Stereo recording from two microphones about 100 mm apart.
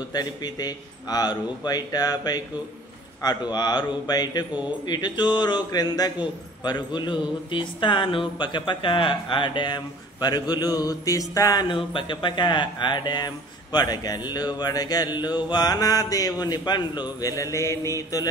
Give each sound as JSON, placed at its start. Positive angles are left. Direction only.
{"t": 0.1, "sound": "a man's voice", "side_deg": 40}
{"t": 11.7, "sound": "speech", "side_deg": 55}